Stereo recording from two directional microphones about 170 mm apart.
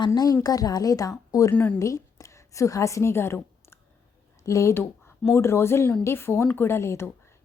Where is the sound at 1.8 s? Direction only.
20° left (ahead or behind).